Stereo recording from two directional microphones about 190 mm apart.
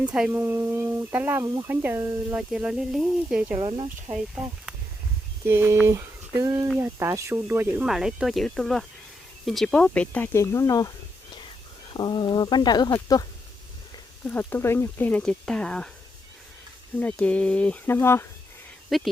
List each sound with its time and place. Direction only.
0.0 s speech: 5° right (ahead or behind)
3.6 s speech: 30° right (ahead or behind)
5.5 s speech: 10° right (ahead or behind); by 10.9 s 15° left (ahead or behind)
11.9 s speech: 25° left (ahead or behind)
14.3 s speech: 10° left (ahead or behind)
17.0 s speech: 5° left (ahead or behind)
18.9 s speech: centre (ahead or behind)